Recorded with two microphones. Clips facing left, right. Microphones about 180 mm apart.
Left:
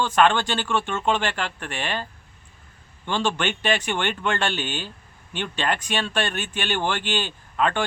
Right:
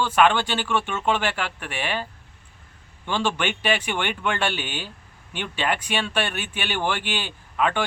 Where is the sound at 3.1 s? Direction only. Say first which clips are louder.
Even; 10° right (ahead or behind).